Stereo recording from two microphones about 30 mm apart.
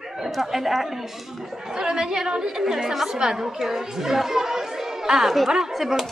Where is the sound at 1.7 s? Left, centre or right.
Right.